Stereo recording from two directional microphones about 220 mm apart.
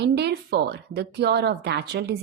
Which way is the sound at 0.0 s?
45° right (ahead or behind).